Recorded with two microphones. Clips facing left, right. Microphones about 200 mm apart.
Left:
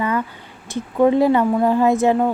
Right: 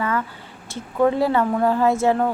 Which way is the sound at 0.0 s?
15° left (ahead or behind).